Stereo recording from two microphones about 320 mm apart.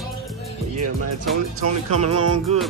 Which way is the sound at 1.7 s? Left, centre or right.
Right.